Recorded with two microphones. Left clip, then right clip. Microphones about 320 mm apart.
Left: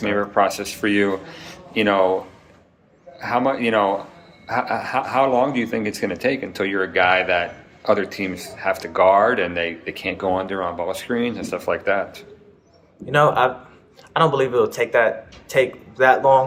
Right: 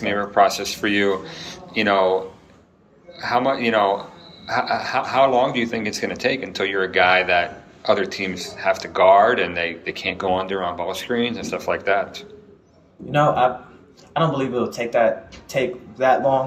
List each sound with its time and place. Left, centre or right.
0.0 s a man's voice: centre
3.2 s a man's voice: centre